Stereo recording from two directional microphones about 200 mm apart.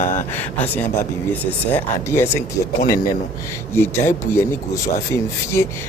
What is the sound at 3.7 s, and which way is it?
Speech, 10° left (ahead or behind).